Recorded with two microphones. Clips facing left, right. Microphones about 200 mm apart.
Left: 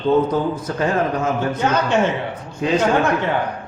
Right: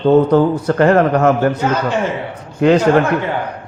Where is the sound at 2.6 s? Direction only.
70° right (ahead or behind).